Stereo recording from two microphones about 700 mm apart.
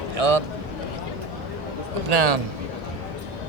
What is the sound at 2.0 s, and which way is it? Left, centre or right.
Speech, right.